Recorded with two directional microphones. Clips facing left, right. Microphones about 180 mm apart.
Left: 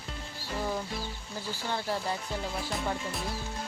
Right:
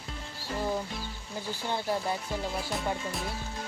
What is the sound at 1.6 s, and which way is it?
Speech, 15° right (ahead or behind).